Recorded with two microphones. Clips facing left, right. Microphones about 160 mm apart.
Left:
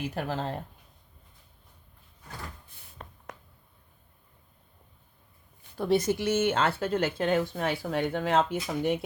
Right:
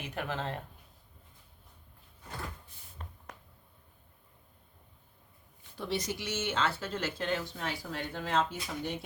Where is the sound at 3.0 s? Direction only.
90° left.